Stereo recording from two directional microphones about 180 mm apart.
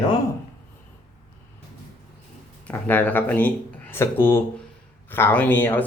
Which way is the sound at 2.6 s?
10° left (ahead or behind).